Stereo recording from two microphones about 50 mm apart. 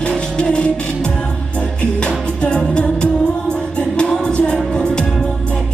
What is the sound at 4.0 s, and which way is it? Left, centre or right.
Music, centre.